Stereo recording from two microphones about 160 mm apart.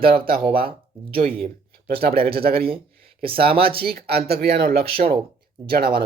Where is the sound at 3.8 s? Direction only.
75° right (ahead or behind).